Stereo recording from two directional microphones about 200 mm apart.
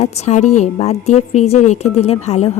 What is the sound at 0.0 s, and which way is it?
A woman's voice, 35° left (ahead or behind).